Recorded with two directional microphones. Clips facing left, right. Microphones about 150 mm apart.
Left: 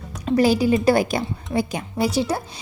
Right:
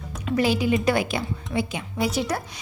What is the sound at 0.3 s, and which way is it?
A woman's voice, 40° left (ahead or behind).